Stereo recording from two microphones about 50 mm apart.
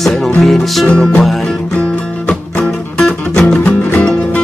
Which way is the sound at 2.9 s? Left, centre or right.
Centre.